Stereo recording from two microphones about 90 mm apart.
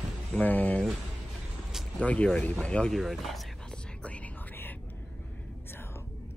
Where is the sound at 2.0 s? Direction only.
15° left (ahead or behind).